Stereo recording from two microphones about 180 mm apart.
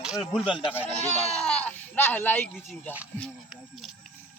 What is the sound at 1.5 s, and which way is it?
A child's voice, 10° left (ahead or behind).